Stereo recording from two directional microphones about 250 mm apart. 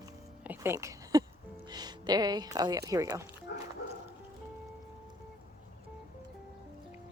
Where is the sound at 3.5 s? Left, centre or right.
Left.